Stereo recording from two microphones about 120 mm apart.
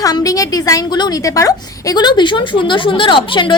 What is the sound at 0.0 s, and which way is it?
A woman's voice, 30° left (ahead or behind).